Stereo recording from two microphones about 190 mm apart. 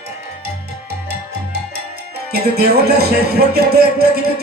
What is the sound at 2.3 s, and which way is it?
Speech, 55° right (ahead or behind).